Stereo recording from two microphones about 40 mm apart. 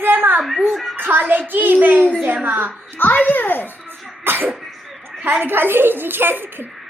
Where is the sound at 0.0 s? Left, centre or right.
Right.